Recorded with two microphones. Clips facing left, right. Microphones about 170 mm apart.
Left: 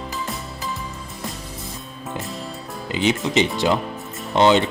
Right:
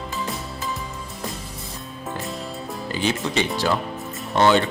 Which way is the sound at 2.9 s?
20° left (ahead or behind).